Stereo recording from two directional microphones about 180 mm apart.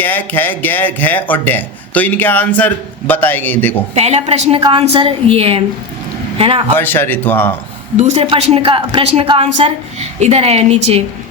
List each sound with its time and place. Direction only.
0.0 s speech: 10° left (ahead or behind)
3.9 s a woman's voice: 35° right (ahead or behind)
6.7 s speech: 10° left (ahead or behind)
7.9 s a woman's voice: 35° right (ahead or behind)